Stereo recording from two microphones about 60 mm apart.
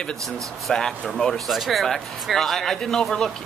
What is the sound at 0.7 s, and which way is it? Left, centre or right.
Speech, centre.